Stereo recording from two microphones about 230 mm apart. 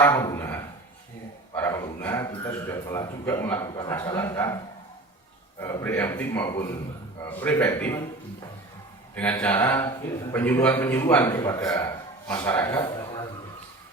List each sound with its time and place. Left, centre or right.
0.0 s a man's voice: centre
9.1 s a man's voice: centre
12.6 s a sound: centre